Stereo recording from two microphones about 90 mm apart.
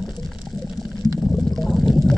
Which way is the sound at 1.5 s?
Centre (ahead or behind).